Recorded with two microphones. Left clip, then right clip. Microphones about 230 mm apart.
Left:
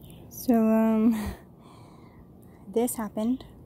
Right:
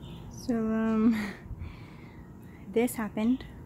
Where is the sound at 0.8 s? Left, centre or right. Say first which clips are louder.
Left 3 dB; centre.